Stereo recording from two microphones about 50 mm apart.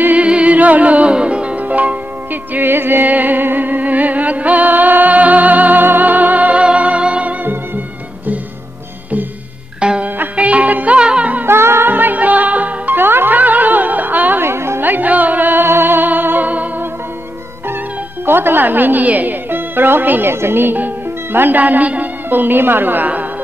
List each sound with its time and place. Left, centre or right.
0.0 s music: right
2.5 s music: right
9.8 s music: centre
11.0 s music: right
11.4 s music: right
11.9 s music: right
14.4 s music: right
14.9 s music: right
18.2 s a woman's voice: right